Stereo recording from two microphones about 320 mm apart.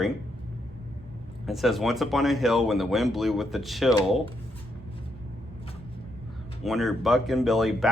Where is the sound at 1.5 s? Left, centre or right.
Centre.